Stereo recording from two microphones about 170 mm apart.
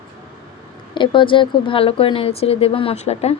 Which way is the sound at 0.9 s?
30° left (ahead or behind).